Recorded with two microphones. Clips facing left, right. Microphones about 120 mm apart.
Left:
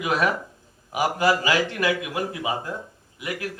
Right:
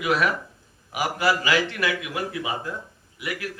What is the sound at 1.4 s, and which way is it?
Speech, 45° left (ahead or behind).